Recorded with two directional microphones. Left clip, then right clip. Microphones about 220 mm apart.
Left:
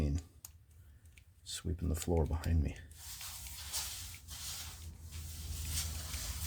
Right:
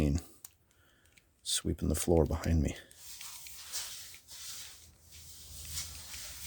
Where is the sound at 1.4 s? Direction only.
50° right (ahead or behind).